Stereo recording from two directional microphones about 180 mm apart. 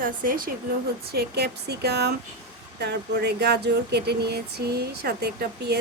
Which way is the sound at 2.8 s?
70° right (ahead or behind).